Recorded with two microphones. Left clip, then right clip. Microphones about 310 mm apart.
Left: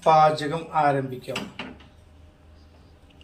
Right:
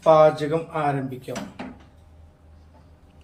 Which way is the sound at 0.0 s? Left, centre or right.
Centre.